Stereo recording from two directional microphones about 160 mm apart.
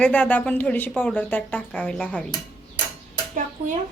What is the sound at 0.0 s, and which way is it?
A woman's voice, 10° left (ahead or behind).